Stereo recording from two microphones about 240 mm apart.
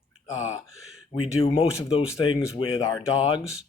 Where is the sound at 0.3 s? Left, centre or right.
Left.